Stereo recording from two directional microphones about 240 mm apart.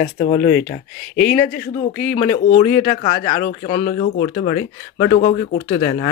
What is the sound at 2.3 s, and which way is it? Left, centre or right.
Speech, left.